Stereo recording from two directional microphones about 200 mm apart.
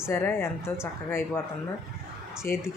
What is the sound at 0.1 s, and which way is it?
Speech, 10° left (ahead or behind).